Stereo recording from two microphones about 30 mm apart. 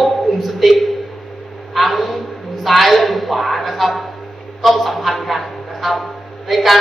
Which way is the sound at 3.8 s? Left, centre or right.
Centre.